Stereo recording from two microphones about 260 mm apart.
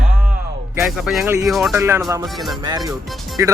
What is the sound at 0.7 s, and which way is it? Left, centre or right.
Speech, centre.